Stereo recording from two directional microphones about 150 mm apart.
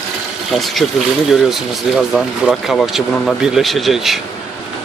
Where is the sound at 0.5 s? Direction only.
Centre (ahead or behind).